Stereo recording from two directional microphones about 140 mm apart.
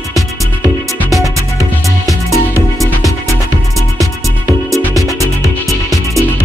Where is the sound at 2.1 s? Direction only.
20° left (ahead or behind).